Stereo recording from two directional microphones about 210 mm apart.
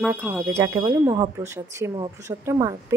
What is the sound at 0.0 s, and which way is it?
Speech, 10° right (ahead or behind).